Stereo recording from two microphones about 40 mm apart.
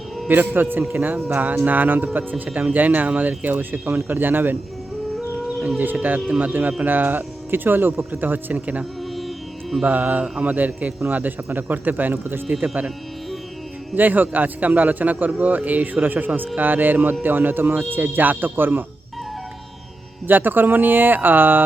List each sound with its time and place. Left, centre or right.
0.3 s a man's voice: right
5.8 s a man's voice: right
6.8 s a man's voice: right
9.1 s music: centre
9.8 s a man's voice: right
13.9 s a man's voice: right
20.2 s speech: right